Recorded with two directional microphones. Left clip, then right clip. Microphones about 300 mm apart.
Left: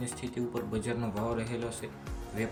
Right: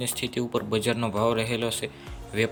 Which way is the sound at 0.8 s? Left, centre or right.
Centre.